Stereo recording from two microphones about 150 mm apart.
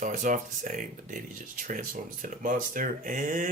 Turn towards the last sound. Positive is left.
turn(degrees=-60)  # may be behind; listen again after turning